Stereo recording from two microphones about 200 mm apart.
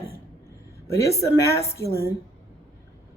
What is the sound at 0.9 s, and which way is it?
Speech, 15° left (ahead or behind).